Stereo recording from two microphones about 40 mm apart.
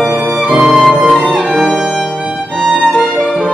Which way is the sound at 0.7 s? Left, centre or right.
Centre.